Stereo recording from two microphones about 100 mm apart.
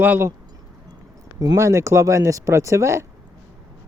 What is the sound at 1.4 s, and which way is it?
Speech, 30° right (ahead or behind).